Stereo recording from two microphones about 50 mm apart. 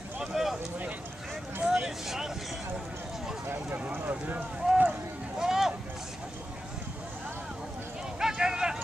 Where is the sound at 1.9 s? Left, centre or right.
Centre.